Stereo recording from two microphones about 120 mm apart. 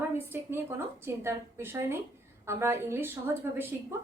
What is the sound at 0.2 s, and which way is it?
Speech, 20° right (ahead or behind).